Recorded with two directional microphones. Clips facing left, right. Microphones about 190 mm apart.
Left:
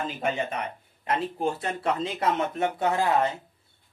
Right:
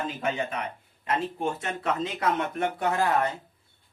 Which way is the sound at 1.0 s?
30° left (ahead or behind).